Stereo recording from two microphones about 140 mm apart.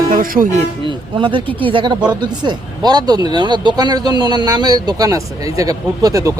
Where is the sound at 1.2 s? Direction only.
40° right (ahead or behind).